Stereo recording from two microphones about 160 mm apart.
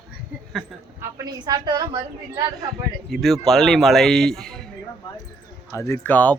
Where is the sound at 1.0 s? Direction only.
25° right (ahead or behind).